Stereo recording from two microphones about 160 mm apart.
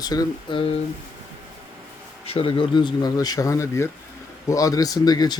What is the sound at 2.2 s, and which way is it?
Speech, 35° left (ahead or behind).